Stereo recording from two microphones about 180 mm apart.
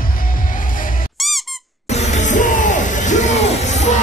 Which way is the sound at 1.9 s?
40° left (ahead or behind).